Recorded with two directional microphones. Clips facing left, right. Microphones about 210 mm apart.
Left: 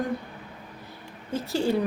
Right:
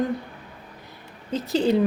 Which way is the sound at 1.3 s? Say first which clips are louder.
Right 4 dB; 20° right (ahead or behind).